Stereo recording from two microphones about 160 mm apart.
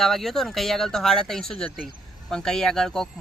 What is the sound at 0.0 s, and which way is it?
Speech, centre (ahead or behind).